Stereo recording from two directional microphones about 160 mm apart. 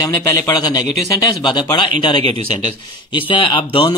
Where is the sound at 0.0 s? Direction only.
20° left (ahead or behind).